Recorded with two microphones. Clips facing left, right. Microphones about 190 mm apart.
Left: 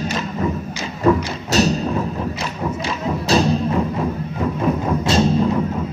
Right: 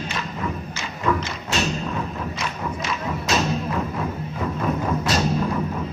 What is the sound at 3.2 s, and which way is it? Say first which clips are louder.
Music: left 7 dB; 35° left (ahead or behind).